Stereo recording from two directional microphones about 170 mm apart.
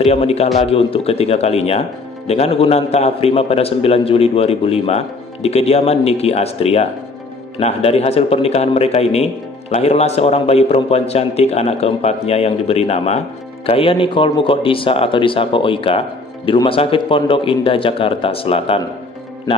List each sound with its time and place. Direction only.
0.0 s speech: 35° left (ahead or behind)